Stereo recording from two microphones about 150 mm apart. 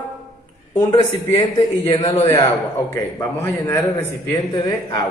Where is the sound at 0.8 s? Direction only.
25° left (ahead or behind).